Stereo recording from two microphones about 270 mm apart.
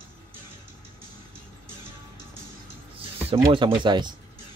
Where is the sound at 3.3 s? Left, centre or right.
Centre.